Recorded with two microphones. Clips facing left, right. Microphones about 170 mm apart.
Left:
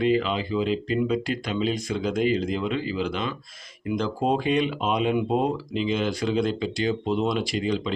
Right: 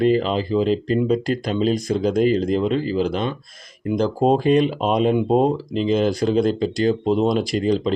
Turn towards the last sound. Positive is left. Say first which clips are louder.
# right 6 dB
turn(degrees=-40)  # may be behind; listen again after turning